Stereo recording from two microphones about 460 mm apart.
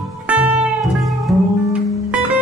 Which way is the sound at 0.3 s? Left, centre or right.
Centre.